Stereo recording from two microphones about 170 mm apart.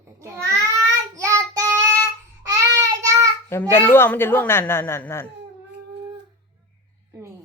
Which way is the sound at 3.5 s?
15° left (ahead or behind).